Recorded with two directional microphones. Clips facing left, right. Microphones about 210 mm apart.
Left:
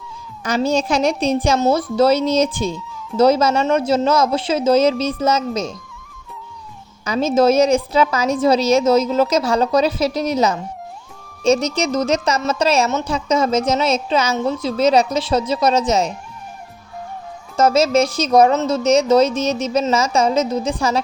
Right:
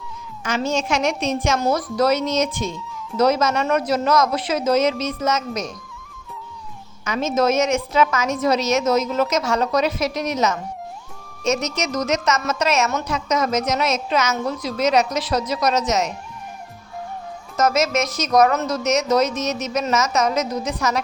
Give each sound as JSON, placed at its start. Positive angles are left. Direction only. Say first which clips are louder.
{"t": 0.4, "sound": "a woman's voice", "louder": "left 4 dB", "side_deg": 35}
{"t": 7.0, "sound": "a woman's voice", "louder": "left 5 dB", "side_deg": 35}
{"t": 17.6, "sound": "a woman's voice", "louder": "left 5 dB", "side_deg": 30}